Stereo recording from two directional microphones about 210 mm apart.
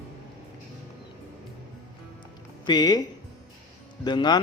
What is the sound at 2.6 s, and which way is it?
Speech, 20° left (ahead or behind).